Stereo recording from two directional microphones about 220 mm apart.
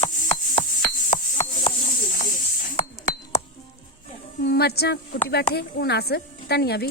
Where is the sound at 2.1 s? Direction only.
40° left (ahead or behind).